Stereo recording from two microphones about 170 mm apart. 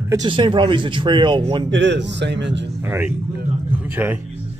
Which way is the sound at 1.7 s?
90° right.